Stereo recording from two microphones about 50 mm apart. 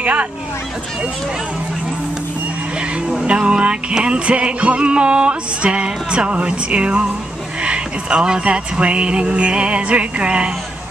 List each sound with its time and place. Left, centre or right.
0.0 s speech: right
3.3 s music: right